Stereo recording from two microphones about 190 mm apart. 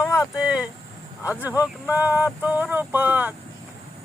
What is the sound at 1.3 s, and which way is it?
Speech, 10° right (ahead or behind).